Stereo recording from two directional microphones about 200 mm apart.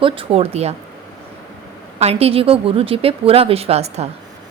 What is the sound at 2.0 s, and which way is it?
A woman's voice, 30° right (ahead or behind).